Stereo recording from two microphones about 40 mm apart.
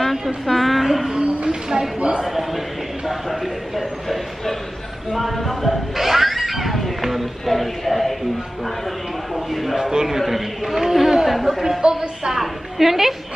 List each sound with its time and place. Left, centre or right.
0.1 s speech: centre
1.2 s speech: right
2.2 s speech: centre
3.1 s a sound: centre
9.3 s a sound: centre
9.8 s a man's voice: centre
11.8 s speech: centre
12.4 s a woman's voice: centre